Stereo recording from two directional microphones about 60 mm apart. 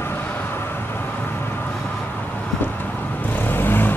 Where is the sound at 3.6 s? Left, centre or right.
Left.